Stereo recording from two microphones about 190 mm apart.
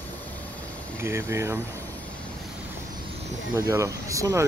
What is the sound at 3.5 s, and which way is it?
Speech, 15° right (ahead or behind).